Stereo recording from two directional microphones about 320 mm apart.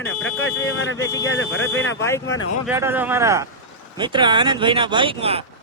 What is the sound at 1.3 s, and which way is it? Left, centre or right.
Speech, left.